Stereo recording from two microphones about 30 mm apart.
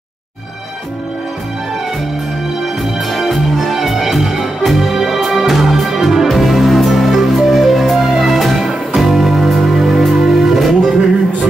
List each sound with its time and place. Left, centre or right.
2.6 s music: centre